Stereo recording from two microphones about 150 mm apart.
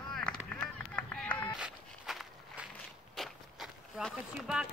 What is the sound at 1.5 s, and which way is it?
Walk, 5° right (ahead or behind).